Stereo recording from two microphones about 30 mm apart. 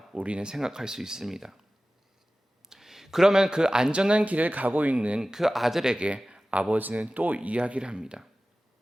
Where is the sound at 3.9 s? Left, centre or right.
Right.